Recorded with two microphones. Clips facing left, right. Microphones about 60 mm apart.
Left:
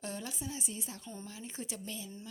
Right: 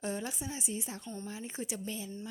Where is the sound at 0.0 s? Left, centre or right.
Right.